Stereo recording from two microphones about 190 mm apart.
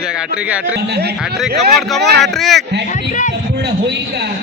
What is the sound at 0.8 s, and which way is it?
Speech, 60° right (ahead or behind).